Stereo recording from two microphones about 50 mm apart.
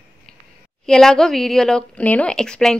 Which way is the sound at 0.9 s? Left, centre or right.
Centre.